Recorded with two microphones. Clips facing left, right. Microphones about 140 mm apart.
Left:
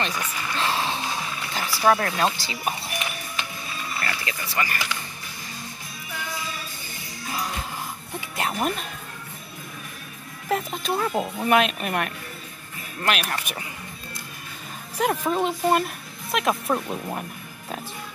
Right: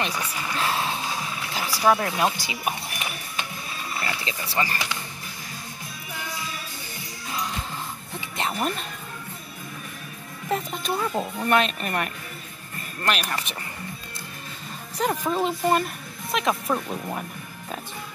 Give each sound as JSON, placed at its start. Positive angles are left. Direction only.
{"t": 0.0, "sound": "music", "side_deg": -10}
{"t": 1.9, "sound": "speech", "side_deg": -10}
{"t": 4.0, "sound": "speech", "side_deg": -20}
{"t": 8.4, "sound": "speech", "side_deg": 5}
{"t": 10.5, "sound": "speech", "side_deg": 0}
{"t": 15.0, "sound": "speech", "side_deg": 5}